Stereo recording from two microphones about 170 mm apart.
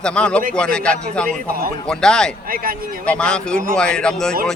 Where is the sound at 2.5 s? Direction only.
60° right (ahead or behind).